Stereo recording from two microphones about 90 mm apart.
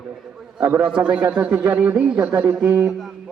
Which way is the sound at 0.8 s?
10° right (ahead or behind).